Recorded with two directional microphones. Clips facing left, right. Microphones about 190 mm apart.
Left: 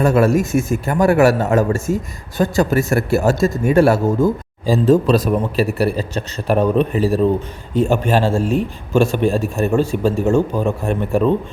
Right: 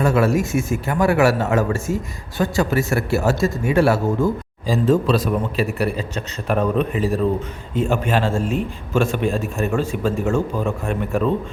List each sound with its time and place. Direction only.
0.0 s a man's voice: 50° left (ahead or behind)
4.6 s a man's voice: 35° left (ahead or behind)